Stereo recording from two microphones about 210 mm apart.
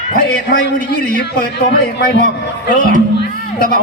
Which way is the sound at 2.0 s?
50° left (ahead or behind).